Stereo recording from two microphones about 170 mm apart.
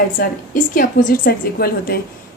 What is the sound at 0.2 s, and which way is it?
A woman's voice, 55° left (ahead or behind).